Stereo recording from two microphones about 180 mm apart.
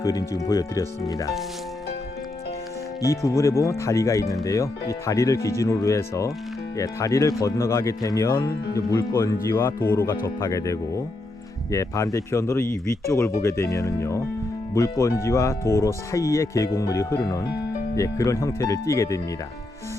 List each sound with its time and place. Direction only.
0.0 s speech: 20° left (ahead or behind)
3.0 s speech: 15° left (ahead or behind)